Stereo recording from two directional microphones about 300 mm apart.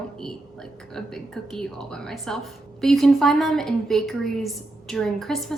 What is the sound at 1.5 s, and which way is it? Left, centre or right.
A woman's voice, centre.